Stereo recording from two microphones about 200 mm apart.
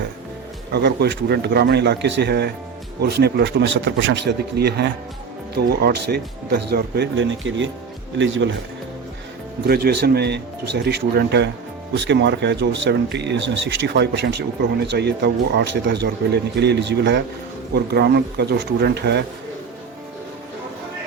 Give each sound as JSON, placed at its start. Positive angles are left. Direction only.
{"t": 0.7, "sound": "speech", "side_deg": -55}
{"t": 9.6, "sound": "speech", "side_deg": -50}